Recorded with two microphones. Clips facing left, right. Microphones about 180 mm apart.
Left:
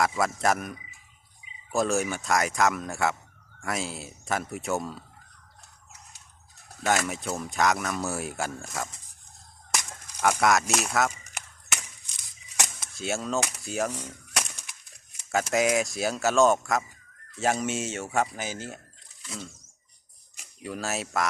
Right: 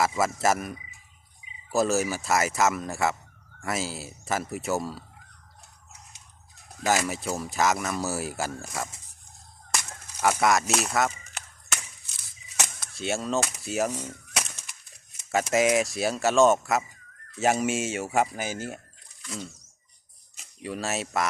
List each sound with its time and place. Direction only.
0.0 s speech: 5° right (ahead or behind)
6.8 s speech: centre (ahead or behind)
9.7 s a sound: 5° right (ahead or behind)
11.2 s a sound: 15° left (ahead or behind)
12.9 s speech: centre (ahead or behind)
15.3 s speech: centre (ahead or behind)
20.6 s speech: centre (ahead or behind)